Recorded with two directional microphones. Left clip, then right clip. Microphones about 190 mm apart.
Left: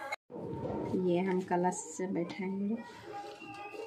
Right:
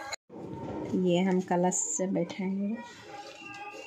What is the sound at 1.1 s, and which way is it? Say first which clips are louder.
A woman's voice: right 4 dB; 50° right (ahead or behind).